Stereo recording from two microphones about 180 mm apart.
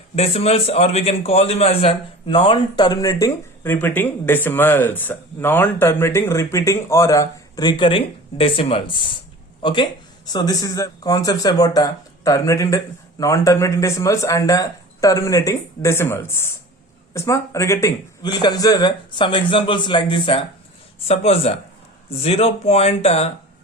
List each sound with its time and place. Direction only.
0.2 s a man's voice: 35° left (ahead or behind)